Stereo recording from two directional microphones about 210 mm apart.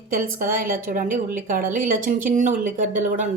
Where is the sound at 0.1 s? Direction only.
40° right (ahead or behind).